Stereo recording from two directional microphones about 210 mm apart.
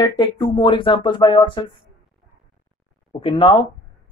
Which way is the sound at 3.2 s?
25° left (ahead or behind).